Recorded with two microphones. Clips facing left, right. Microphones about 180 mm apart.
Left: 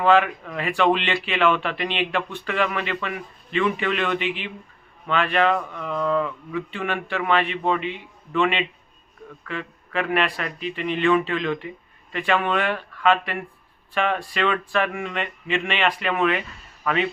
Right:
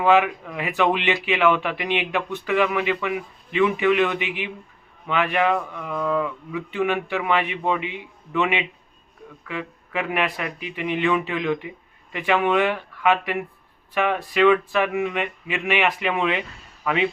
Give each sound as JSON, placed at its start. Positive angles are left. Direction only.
{"t": 0.0, "sound": "a man's voice", "side_deg": -10}